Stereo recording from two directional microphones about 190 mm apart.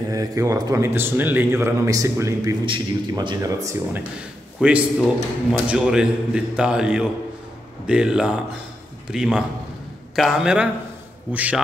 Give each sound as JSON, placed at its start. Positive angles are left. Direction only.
{"t": 0.1, "sound": "speech", "side_deg": -20}
{"t": 4.6, "sound": "a man's voice", "side_deg": -5}